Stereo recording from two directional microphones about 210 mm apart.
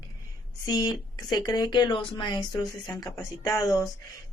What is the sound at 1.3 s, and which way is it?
Speech, 20° left (ahead or behind).